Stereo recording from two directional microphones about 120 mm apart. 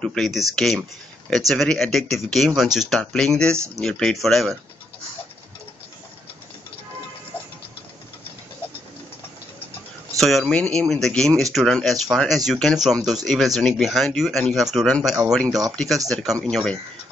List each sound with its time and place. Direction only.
0.0 s speech: 5° left (ahead or behind)
3.5 s speech: 25° right (ahead or behind)
3.8 s speech: 5° left (ahead or behind)
10.1 s speech: centre (ahead or behind)